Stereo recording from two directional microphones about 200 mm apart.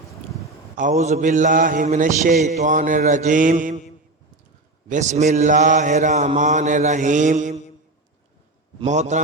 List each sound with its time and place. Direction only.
0.8 s a man's voice: 35° right (ahead or behind)
4.9 s a man's voice: 35° right (ahead or behind)
8.8 s a man's voice: 35° right (ahead or behind)